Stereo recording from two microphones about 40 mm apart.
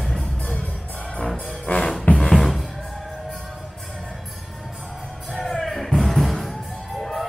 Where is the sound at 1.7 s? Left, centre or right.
Left.